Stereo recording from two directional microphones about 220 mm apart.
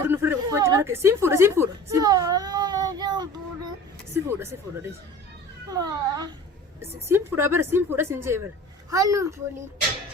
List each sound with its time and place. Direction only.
0.1 s a woman's voice: 10° right (ahead or behind)